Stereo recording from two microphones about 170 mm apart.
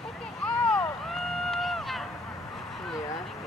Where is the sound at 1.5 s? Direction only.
Centre (ahead or behind).